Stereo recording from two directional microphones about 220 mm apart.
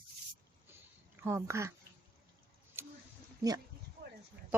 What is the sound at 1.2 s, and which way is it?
Speech, 10° right (ahead or behind).